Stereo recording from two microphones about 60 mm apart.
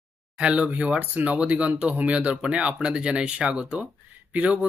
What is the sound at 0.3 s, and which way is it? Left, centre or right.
Speech, centre.